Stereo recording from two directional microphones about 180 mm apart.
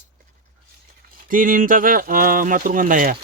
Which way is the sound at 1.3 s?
50° right (ahead or behind).